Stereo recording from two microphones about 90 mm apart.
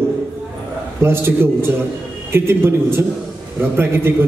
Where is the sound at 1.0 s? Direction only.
25° right (ahead or behind).